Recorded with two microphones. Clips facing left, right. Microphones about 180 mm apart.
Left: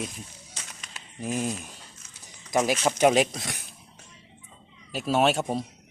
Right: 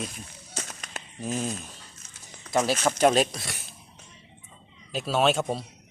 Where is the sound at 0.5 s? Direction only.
45° right (ahead or behind).